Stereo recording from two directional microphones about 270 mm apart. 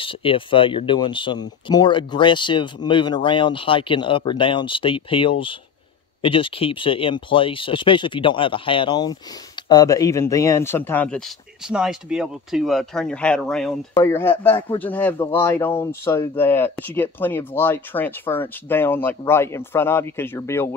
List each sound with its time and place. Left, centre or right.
0.0 s speech: centre